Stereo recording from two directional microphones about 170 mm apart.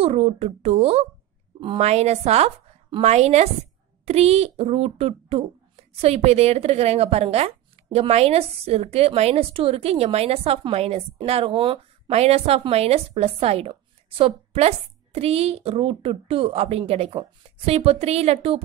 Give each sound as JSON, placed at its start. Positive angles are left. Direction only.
{"t": 0.0, "sound": "a woman's voice", "side_deg": -35}